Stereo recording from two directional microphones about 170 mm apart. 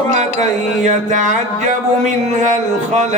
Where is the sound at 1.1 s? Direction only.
45° right (ahead or behind).